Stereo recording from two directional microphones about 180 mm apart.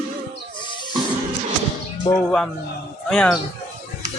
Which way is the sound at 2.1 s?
25° left (ahead or behind).